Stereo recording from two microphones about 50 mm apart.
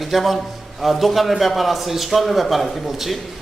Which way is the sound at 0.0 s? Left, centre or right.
Centre.